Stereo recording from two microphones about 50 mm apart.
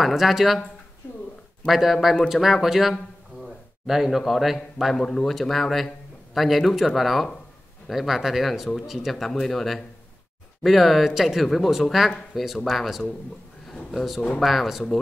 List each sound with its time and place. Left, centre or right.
0.0 s speech: centre
1.0 s speech: left
1.7 s speech: centre
3.4 s a sound: centre
4.3 s speech: centre
4.9 s speech: centre